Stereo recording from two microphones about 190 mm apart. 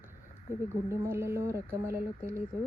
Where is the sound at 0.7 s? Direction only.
15° right (ahead or behind).